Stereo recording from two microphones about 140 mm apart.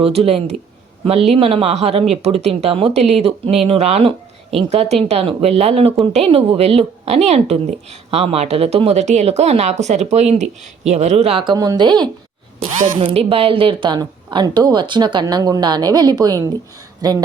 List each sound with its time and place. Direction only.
0.0 s a woman's voice: 45° right (ahead or behind)
11.5 s speech: 25° right (ahead or behind)
13.0 s speech: 40° right (ahead or behind)